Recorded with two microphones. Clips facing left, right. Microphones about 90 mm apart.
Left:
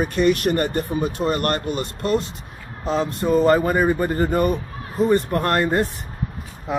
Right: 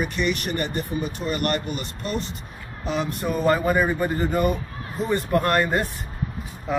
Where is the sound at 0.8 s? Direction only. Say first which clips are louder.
Left 5 dB; 60° left (ahead or behind).